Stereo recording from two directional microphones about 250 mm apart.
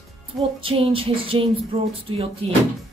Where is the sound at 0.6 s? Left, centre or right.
Right.